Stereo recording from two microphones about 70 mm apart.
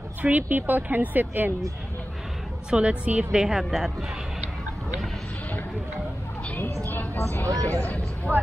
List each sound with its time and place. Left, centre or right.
0.2 s speech: right
2.7 s a woman's voice: centre
6.8 s vehicle: left
7.2 s speech: left